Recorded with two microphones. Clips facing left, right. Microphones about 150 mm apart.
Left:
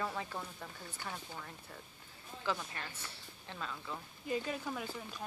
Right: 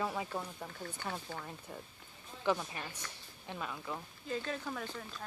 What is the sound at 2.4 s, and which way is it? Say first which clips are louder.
A woman's voice: right 5 dB; 15° right (ahead or behind).